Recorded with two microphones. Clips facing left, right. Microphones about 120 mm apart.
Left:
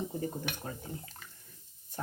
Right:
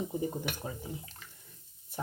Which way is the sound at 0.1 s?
15° right (ahead or behind).